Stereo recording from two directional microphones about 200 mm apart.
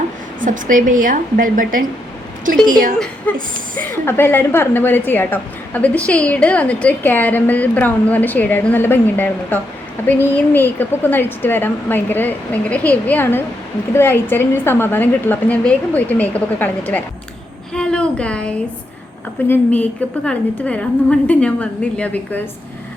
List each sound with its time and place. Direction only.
0.3 s a woman's voice: 40° right (ahead or behind)
3.3 s a woman's voice: 5° left (ahead or behind)